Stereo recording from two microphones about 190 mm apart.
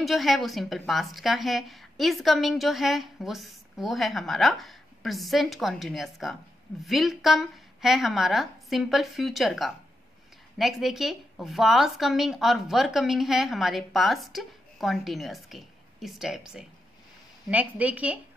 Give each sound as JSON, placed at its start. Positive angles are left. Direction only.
{"t": 0.0, "sound": "a woman's voice", "side_deg": 0}